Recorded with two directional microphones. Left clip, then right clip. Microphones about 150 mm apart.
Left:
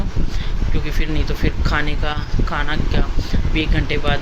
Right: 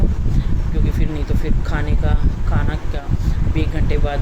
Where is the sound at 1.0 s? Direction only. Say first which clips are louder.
Left 6 dB; 5° right (ahead or behind).